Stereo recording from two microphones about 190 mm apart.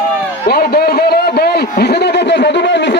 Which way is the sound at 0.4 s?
55° left (ahead or behind).